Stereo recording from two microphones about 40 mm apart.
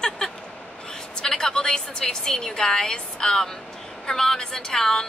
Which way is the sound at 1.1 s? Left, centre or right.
Centre.